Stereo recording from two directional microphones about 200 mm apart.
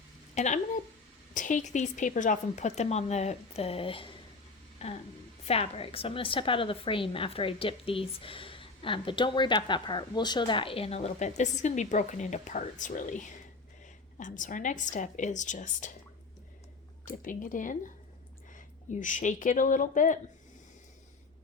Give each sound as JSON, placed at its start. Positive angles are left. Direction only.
{"t": 0.3, "sound": "a woman's voice", "side_deg": 35}
{"t": 17.1, "sound": "a woman's voice", "side_deg": 40}